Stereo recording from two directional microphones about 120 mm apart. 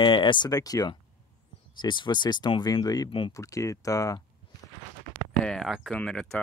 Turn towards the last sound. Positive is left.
turn(degrees=5)  # may be behind; listen again after turning